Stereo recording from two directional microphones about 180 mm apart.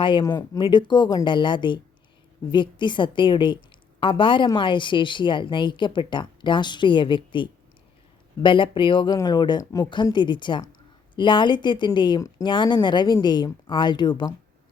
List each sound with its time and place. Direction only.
0.0 s speech: 25° left (ahead or behind)